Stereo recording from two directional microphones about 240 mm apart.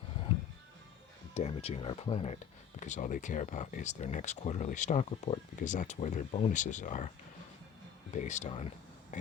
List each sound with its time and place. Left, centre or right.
1.3 s speech: left
8.1 s speech: left